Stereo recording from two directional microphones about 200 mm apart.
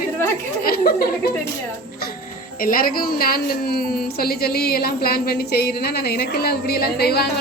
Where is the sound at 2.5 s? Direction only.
45° left (ahead or behind).